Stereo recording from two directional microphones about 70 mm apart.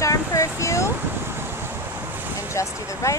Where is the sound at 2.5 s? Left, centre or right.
Left.